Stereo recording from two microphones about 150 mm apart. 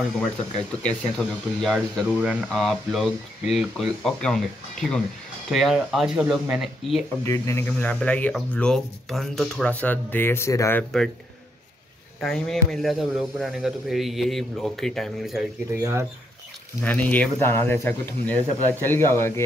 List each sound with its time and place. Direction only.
0.7 s speech: 5° left (ahead or behind)
7.2 s speech: 20° left (ahead or behind)
12.2 s speech: centre (ahead or behind)
15.8 s speech: 20° right (ahead or behind)
16.8 s speech: 10° left (ahead or behind)